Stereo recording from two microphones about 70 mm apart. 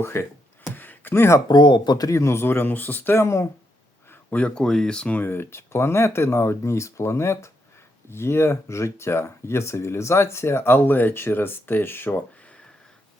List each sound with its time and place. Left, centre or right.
0.0 s speech: left
0.8 s a sound: left
1.5 s speech: left
2.0 s speech: left
3.2 s speech: left
4.1 s a sound: left
4.6 s speech: centre
5.2 s speech: left